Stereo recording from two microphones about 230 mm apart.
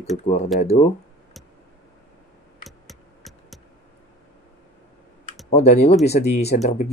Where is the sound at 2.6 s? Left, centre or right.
Centre.